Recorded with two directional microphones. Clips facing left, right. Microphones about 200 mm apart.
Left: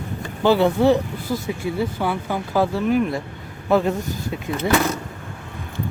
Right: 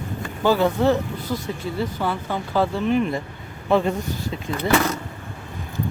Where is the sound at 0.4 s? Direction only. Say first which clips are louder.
Left 2 dB; 15° left (ahead or behind).